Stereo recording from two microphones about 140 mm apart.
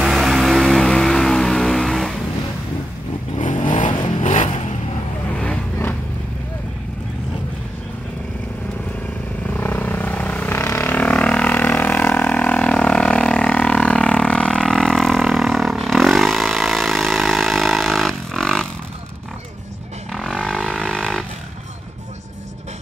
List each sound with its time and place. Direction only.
0.0 s vehicle: 5° right (ahead or behind)
3.5 s vehicle: 35° left (ahead or behind)
3.8 s vehicle: 60° left (ahead or behind)
5.3 s vehicle: 10° left (ahead or behind)
9.5 s vehicle: 15° left (ahead or behind)
20.1 s vehicle: centre (ahead or behind)